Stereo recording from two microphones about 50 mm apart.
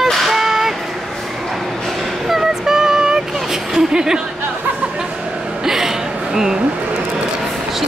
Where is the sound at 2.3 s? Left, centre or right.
Centre.